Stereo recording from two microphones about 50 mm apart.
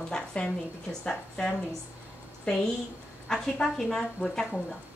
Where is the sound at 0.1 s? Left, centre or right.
Centre.